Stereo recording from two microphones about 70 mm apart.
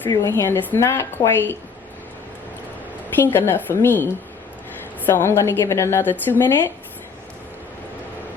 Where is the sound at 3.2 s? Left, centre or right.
Left.